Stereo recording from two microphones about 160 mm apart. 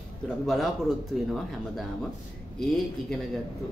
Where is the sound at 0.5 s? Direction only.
Centre (ahead or behind).